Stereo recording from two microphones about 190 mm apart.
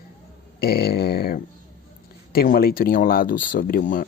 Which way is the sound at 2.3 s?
50° left (ahead or behind).